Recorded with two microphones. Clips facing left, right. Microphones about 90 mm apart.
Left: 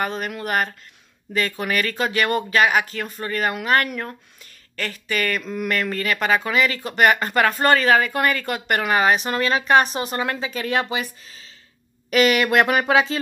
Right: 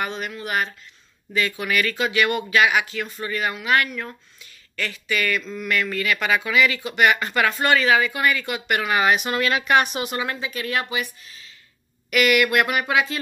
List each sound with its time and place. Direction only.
0.0 s speech: 40° left (ahead or behind)
10.4 s speech: 35° left (ahead or behind)